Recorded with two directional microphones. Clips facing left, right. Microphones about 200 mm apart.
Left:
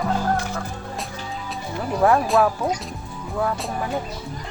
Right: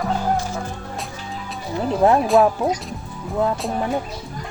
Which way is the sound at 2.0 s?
20° right (ahead or behind).